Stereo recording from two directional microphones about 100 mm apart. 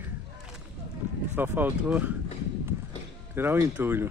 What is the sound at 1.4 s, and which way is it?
Speech, 20° right (ahead or behind).